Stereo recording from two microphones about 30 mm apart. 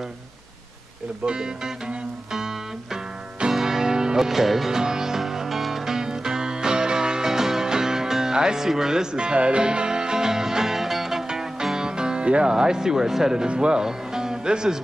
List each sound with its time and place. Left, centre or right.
1.2 s speech: right
2.3 s music: centre
4.3 s music: centre
4.7 s music: centre
9.1 s music: right; by 11.2 s centre
11.8 s music: right
12.3 s speech: right
12.5 s speech: right
13.5 s speech: right
13.7 s music: right